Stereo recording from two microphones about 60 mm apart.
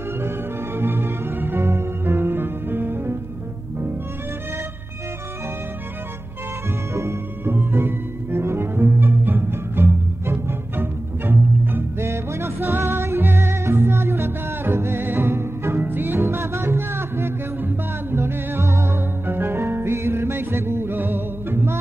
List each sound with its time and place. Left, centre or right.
0.7 s music: right
6.9 s music: right